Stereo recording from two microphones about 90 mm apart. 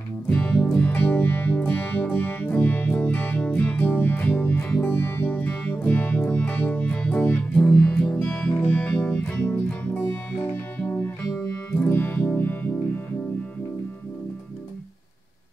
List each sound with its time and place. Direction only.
0.3 s music: 10° left (ahead or behind)